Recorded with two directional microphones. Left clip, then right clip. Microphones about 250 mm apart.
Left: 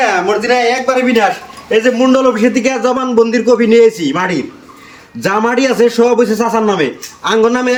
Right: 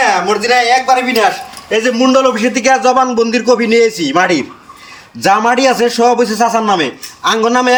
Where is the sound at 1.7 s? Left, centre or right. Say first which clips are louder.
Left 1 dB; centre.